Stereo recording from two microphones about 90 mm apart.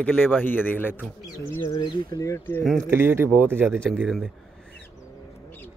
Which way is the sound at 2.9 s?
25° right (ahead or behind).